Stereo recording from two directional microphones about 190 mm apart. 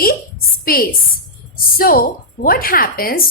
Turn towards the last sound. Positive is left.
turn(degrees=50)  # may be behind; listen again after turning